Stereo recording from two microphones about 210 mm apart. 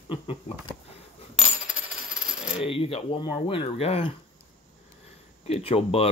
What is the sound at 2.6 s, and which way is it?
Speech, 25° left (ahead or behind).